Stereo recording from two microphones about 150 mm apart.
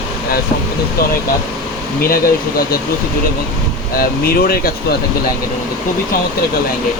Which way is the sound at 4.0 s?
85° left.